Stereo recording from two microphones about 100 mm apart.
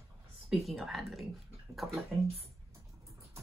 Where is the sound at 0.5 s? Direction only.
Centre (ahead or behind).